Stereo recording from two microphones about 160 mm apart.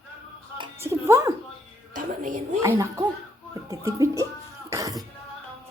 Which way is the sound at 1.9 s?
55° right (ahead or behind).